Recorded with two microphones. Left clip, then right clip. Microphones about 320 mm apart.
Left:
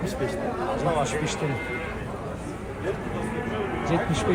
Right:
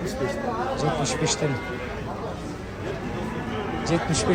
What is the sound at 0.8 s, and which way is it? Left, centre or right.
Speech, centre.